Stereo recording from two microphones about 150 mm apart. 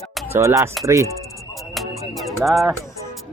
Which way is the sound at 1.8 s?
Centre (ahead or behind).